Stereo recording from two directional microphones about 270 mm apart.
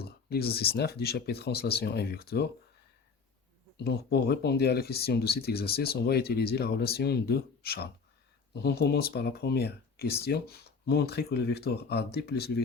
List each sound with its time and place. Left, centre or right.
0.0 s speech: left
3.8 s speech: left